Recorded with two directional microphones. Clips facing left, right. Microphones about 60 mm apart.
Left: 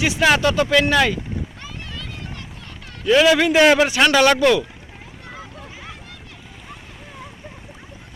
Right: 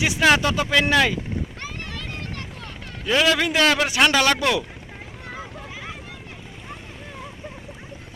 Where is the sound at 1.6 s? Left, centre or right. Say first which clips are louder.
Right 1 dB; right.